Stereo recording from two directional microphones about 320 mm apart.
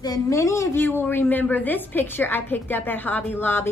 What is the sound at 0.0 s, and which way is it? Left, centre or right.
A woman's voice, centre.